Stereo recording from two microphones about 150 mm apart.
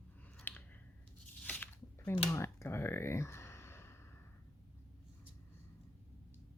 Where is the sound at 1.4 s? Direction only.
10° left (ahead or behind).